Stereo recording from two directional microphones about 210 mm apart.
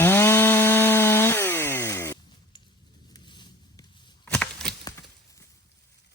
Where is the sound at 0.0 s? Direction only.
10° left (ahead or behind).